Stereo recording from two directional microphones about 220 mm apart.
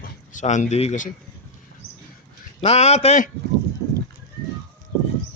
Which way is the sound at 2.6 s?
30° left (ahead or behind).